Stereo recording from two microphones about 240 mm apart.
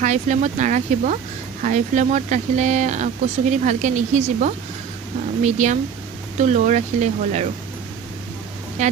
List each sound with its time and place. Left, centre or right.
0.0 s speech: right
8.8 s speech: right